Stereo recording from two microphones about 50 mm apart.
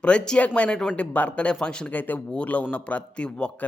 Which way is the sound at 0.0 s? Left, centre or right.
Left.